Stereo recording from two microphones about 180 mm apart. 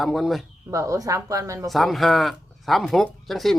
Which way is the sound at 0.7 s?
20° right (ahead or behind).